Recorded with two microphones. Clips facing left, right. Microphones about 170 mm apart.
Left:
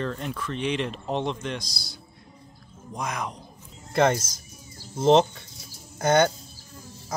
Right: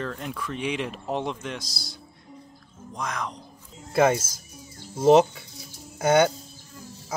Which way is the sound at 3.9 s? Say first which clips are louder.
Right 1 dB; 5° right (ahead or behind).